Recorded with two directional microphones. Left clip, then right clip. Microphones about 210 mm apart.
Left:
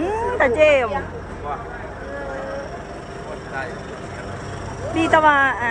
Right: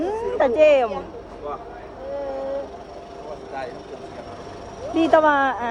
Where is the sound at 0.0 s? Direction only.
10° right (ahead or behind).